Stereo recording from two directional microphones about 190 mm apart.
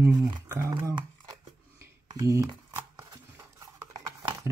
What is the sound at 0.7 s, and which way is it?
Speech, 25° right (ahead or behind).